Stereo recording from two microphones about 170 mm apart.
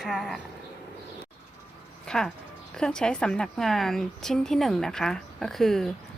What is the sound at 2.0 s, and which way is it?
A woman's voice, 5° left (ahead or behind).